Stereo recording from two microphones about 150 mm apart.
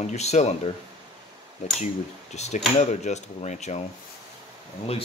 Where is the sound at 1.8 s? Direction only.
50° left (ahead or behind).